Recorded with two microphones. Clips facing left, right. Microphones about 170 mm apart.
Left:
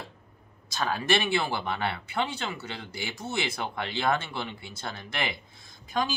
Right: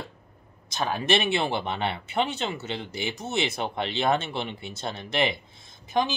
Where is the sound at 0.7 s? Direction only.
20° right (ahead or behind).